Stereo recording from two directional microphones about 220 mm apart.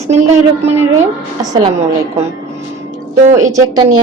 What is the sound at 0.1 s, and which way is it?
Speech, 30° right (ahead or behind).